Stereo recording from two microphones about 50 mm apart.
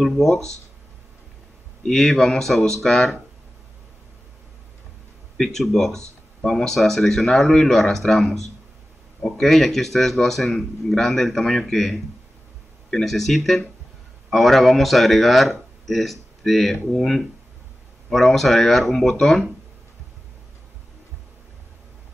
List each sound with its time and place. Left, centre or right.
0.0 s a man's voice: centre
1.9 s speech: centre
5.4 s speech: centre
9.4 s a man's voice: centre